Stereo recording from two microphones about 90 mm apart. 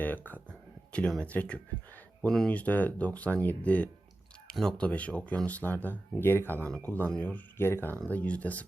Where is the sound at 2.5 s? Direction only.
15° left (ahead or behind).